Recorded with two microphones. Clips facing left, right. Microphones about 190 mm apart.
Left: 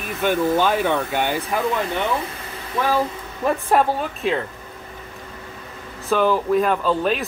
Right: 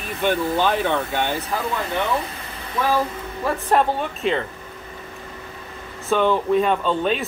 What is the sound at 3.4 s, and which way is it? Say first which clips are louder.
Speech: left 3 dB; 20° left (ahead or behind).